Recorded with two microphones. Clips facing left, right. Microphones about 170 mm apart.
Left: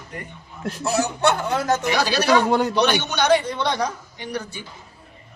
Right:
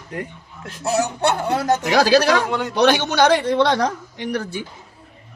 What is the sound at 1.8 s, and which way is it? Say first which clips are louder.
Speech: right 5 dB; 70° right (ahead or behind).